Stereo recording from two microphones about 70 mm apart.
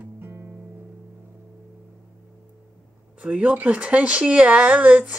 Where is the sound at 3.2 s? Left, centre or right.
Centre.